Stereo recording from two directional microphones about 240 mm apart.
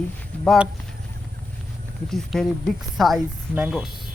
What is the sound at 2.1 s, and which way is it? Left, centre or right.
A woman's voice, centre.